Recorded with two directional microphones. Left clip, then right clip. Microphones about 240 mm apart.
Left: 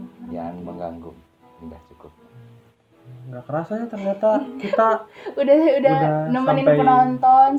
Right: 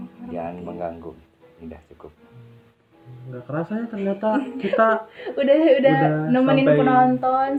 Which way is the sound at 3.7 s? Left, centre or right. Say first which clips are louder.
Left 2 dB; left.